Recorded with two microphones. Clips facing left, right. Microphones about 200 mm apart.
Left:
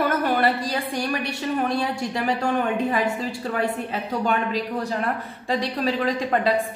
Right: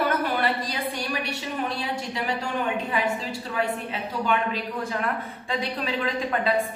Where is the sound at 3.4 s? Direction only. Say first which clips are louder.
Left 2 dB; 50° left (ahead or behind).